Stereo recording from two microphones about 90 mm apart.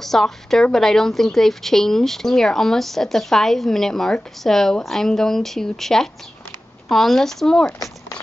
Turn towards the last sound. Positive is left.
turn(degrees=5)  # may be behind; listen again after turning